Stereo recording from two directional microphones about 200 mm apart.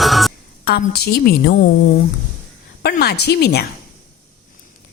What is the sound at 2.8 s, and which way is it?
Speech, 50° left (ahead or behind).